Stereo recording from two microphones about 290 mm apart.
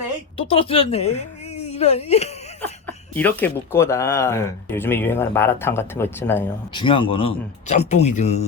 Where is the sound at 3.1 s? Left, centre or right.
Centre.